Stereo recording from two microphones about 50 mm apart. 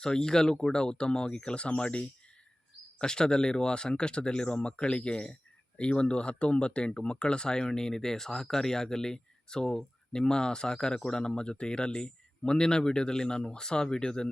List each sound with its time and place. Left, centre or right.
0.0 s speech: centre